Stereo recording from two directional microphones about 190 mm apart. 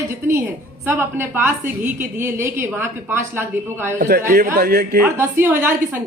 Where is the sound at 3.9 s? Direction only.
50° right (ahead or behind).